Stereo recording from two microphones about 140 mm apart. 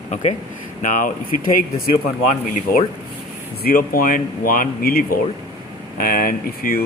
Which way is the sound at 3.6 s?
90° left.